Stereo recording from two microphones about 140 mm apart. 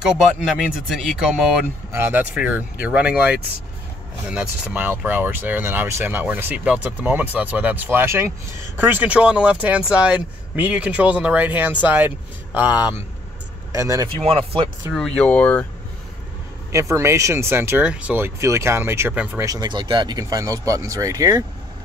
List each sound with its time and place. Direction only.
0.0 s speech: 5° right (ahead or behind)
1.9 s speech: 15° right (ahead or behind)
13.7 s speech: 25° right (ahead or behind)
14.0 s speech: 40° right (ahead or behind)
15.0 s speech: 5° left (ahead or behind)
16.7 s speech: 20° right (ahead or behind)
19.5 s speech: 35° right (ahead or behind)